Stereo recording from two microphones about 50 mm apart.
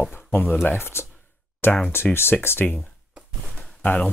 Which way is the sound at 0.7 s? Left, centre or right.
Left.